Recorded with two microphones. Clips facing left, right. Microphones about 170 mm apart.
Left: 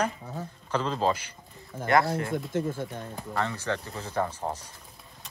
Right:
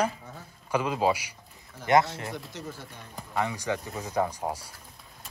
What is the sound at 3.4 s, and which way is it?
A man's voice, 15° right (ahead or behind).